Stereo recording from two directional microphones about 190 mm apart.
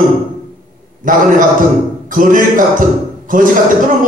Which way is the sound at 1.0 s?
45° right (ahead or behind).